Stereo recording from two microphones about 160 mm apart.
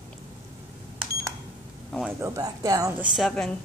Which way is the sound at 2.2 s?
20° right (ahead or behind).